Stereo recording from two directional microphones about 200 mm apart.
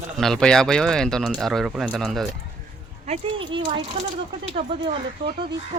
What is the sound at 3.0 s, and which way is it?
Speech, 30° right (ahead or behind).